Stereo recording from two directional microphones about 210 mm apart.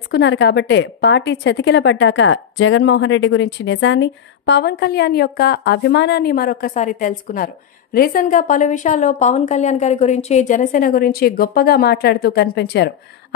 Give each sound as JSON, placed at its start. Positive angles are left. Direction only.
{"t": 0.1, "sound": "a woman's voice", "side_deg": 55}